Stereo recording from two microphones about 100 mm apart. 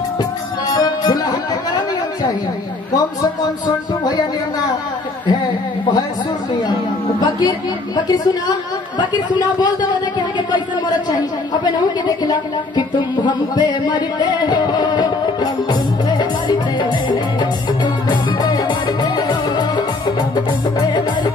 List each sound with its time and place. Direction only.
0.2 s music: 40° left (ahead or behind)
7.2 s a woman's voice: 45° left (ahead or behind)
12.3 s speech: 50° left (ahead or behind)
18.0 s music: 45° left (ahead or behind)